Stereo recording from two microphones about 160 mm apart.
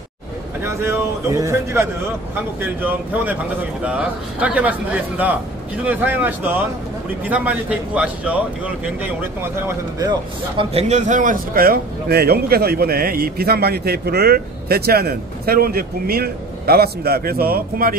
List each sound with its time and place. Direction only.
0.6 s a man's voice: 15° right (ahead or behind)
10.6 s a man's voice: 40° right (ahead or behind); by 17.9 s 65° right (ahead or behind)